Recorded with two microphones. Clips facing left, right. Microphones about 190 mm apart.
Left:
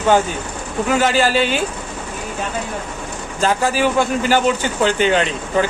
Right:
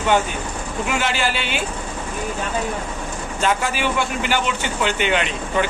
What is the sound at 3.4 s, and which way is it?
Speech, 35° left (ahead or behind).